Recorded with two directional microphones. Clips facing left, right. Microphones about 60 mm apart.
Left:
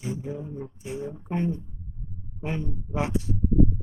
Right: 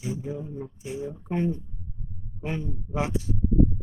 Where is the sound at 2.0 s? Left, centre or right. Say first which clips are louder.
Left 1 dB; left.